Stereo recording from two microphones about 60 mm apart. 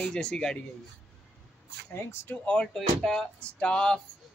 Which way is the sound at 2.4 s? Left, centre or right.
Centre.